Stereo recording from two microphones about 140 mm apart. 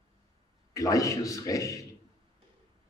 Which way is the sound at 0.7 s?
25° left (ahead or behind).